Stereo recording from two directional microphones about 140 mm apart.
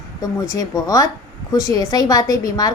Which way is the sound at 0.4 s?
25° left (ahead or behind).